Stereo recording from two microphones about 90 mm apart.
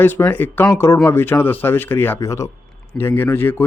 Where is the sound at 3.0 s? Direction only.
25° left (ahead or behind).